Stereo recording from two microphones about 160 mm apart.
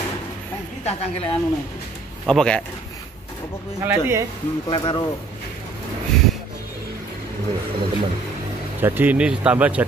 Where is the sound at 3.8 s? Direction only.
15° right (ahead or behind).